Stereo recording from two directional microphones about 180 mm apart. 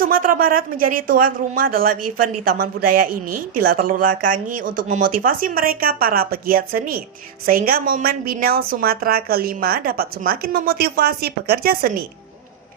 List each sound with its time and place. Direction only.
0.0 s a woman's voice: 50° right (ahead or behind)